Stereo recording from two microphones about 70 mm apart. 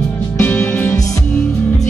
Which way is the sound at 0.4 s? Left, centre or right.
Left.